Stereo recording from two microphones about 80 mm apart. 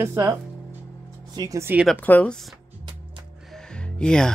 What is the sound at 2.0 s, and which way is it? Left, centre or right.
Speech, left.